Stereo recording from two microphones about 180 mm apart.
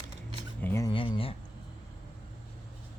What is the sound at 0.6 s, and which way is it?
Speech, 15° left (ahead or behind).